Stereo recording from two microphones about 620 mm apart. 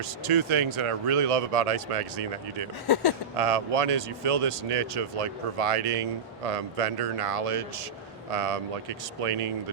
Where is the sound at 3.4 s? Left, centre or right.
Right.